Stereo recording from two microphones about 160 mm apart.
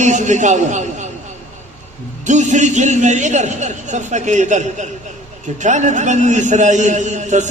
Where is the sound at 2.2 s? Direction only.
50° right (ahead or behind).